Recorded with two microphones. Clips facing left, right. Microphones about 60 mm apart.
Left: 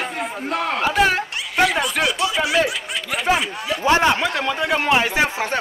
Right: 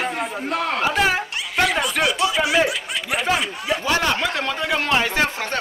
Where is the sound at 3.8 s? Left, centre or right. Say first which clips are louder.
Left 6 dB; left.